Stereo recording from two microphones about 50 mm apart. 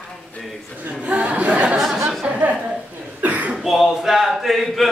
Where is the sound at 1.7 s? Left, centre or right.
Centre.